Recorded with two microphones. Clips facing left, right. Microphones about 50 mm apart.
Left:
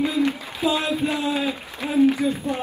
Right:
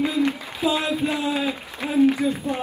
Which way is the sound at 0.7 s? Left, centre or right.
Centre.